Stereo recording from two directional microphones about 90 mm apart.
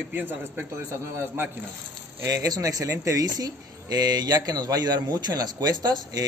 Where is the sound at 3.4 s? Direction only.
50° right (ahead or behind).